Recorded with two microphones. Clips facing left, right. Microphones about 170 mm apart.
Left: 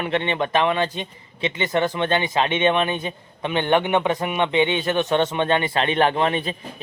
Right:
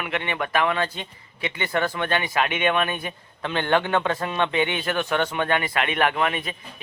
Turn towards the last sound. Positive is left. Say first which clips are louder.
# left 3 dB
turn(degrees=30)  # may be behind; listen again after turning